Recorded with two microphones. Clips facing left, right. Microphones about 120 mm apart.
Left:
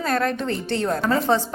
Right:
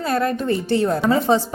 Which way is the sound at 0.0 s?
5° right (ahead or behind).